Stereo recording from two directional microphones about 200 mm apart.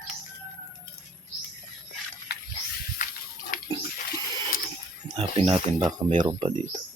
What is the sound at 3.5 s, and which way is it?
Bathtub, 45° left (ahead or behind).